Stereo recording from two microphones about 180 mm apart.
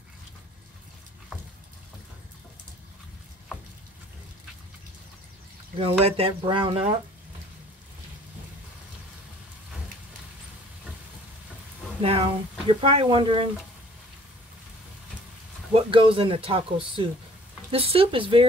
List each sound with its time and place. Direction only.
5.8 s speech: 30° right (ahead or behind)
12.0 s speech: 30° right (ahead or behind)
15.7 s speech: 30° right (ahead or behind)